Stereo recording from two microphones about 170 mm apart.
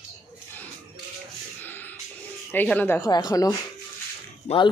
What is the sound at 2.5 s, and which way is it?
Speech, 10° left (ahead or behind).